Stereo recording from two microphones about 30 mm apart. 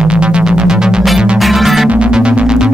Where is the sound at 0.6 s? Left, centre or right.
Right.